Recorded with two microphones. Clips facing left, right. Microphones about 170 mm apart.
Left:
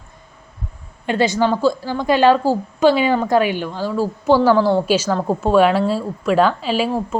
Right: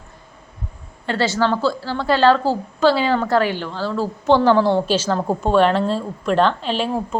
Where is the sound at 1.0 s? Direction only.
15° left (ahead or behind).